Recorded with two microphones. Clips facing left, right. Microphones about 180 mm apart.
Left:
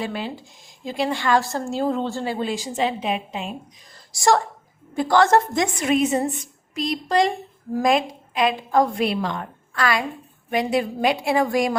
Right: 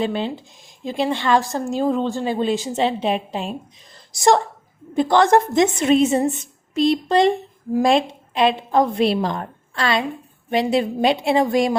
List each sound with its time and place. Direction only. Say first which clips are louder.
0.0 s a woman's voice: right 5 dB; 25° right (ahead or behind)
4.9 s a woman's voice: right 2 dB; 20° right (ahead or behind)